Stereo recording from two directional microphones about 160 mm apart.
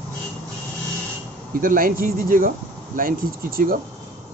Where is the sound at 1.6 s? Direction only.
65° right (ahead or behind).